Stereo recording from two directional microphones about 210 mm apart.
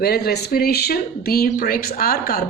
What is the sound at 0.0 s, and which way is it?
Speech, 50° left (ahead or behind).